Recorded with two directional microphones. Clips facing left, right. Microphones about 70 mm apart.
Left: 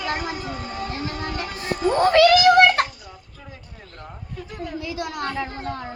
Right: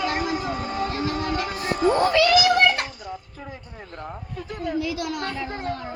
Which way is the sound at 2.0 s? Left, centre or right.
Left.